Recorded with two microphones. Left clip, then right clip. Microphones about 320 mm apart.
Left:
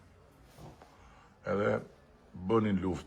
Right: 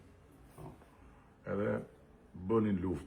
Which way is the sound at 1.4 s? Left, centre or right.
Left.